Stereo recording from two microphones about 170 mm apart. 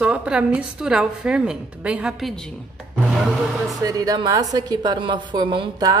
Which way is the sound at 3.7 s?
20° right (ahead or behind).